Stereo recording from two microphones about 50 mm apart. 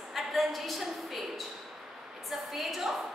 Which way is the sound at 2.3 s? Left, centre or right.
Centre.